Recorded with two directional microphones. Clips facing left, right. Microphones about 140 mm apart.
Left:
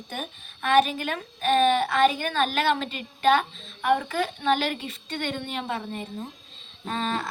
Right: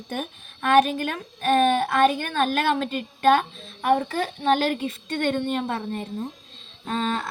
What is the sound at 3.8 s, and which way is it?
A woman's voice, 40° right (ahead or behind).